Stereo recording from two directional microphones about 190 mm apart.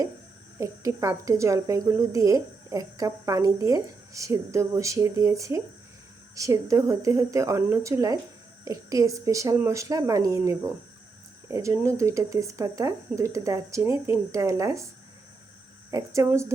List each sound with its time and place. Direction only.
0.6 s speech: 15° right (ahead or behind)
15.9 s speech: 15° right (ahead or behind)